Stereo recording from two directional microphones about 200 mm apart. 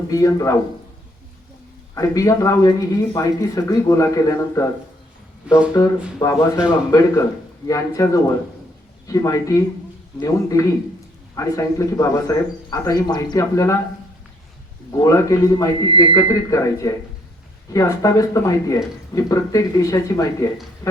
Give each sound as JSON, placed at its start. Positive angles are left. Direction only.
{"t": 0.1, "sound": "speech", "side_deg": 15}
{"t": 2.0, "sound": "speech", "side_deg": 15}
{"t": 5.5, "sound": "speech", "side_deg": -5}
{"t": 6.1, "sound": "speech", "side_deg": 15}
{"t": 14.9, "sound": "speech", "side_deg": 15}
{"t": 20.8, "sound": "a sound", "side_deg": 15}